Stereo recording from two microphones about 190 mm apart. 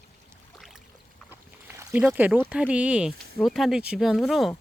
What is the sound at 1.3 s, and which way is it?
Speech, 10° right (ahead or behind).